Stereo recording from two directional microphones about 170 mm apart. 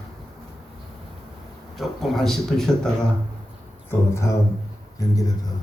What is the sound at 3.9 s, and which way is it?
Speech, 15° left (ahead or behind).